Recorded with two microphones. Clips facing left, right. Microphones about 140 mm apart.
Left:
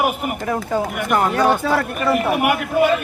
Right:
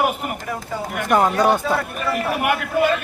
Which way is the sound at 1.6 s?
70° left (ahead or behind).